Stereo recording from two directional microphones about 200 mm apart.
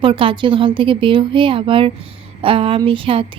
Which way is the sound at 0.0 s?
25° right (ahead or behind).